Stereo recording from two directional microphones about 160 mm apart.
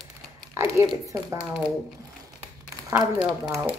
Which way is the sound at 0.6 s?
15° right (ahead or behind).